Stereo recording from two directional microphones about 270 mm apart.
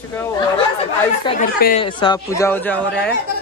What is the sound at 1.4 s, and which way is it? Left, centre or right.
Speech, left.